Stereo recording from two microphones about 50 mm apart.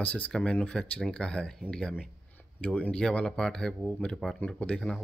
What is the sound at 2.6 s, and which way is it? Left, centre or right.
Speech, left.